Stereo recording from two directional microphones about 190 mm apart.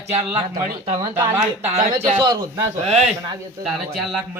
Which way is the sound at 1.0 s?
15° right (ahead or behind).